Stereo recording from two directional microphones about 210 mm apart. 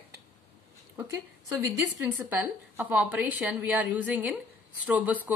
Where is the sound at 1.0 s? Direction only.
15° right (ahead or behind).